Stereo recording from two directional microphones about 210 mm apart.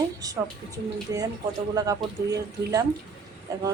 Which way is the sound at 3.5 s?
15° right (ahead or behind).